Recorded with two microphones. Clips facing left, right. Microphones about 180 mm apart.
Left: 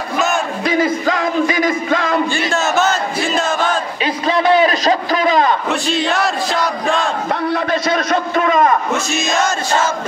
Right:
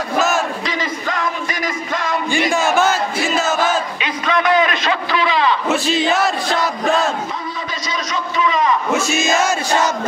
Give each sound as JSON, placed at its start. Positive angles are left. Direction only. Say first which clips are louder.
{"t": 0.7, "sound": "music", "louder": "left 7 dB", "side_deg": 50}
{"t": 2.3, "sound": "battle cry", "louder": "right 1 dB", "side_deg": -15}
{"t": 4.0, "sound": "a sound", "louder": "left 7 dB", "side_deg": 30}
{"t": 5.7, "sound": "battle cry", "louder": "right 1 dB", "side_deg": 0}
{"t": 7.5, "sound": "a man's voice", "louder": "left 9 dB", "side_deg": 60}
{"t": 8.9, "sound": "music", "louder": "right 1 dB", "side_deg": -5}